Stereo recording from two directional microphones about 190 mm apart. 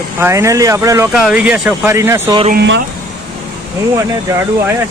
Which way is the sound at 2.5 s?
65° right (ahead or behind).